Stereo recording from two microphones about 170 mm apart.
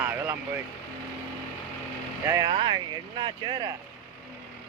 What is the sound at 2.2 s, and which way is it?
Speech, 20° right (ahead or behind).